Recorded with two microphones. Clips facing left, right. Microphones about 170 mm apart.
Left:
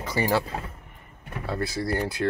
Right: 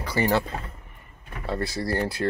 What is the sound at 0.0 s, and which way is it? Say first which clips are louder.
Power windows: right 1 dB; 15° left (ahead or behind).